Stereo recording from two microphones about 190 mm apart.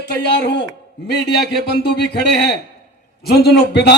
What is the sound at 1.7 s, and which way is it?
Speech, 65° left (ahead or behind).